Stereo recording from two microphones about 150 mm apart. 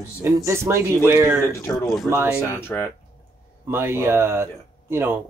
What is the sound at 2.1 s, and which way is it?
Speech, 15° right (ahead or behind).